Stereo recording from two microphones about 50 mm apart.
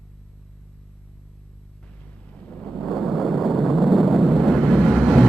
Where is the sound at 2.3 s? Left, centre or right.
Left.